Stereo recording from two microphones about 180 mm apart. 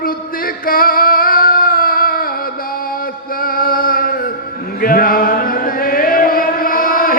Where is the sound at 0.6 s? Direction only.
55° left (ahead or behind).